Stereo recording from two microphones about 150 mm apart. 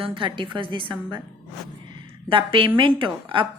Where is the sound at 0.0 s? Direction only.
35° right (ahead or behind).